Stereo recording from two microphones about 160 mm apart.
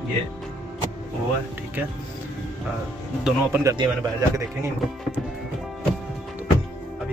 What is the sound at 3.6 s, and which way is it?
Speech, 20° right (ahead or behind).